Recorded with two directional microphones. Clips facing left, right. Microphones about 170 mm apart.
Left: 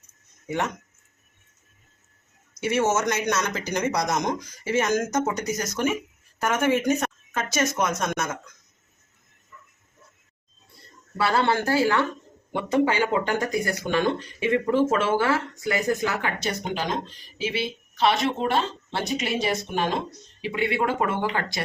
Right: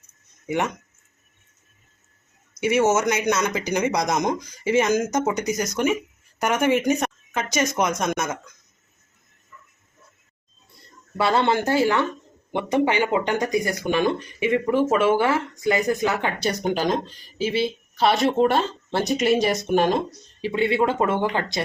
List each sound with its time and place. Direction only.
0.4 s speech: 15° right (ahead or behind)
2.6 s speech: 10° right (ahead or behind)
11.2 s speech: 20° right (ahead or behind)
16.4 s speech: 40° right (ahead or behind)
20.4 s speech: 30° right (ahead or behind)